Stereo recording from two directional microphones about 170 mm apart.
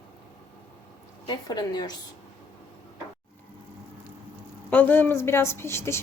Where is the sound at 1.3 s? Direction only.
25° left (ahead or behind).